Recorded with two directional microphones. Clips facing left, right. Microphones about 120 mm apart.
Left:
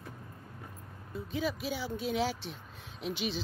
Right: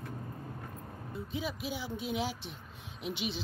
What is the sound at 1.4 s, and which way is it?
Speech, 15° right (ahead or behind).